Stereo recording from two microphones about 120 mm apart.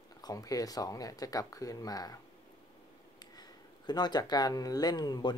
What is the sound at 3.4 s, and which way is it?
Speech, 35° left (ahead or behind).